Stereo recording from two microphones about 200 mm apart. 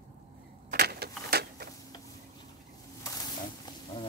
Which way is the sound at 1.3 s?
50° right (ahead or behind).